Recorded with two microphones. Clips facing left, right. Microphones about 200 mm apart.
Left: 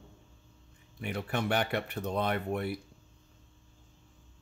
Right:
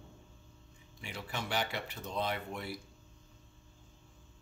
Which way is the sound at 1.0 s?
55° left (ahead or behind).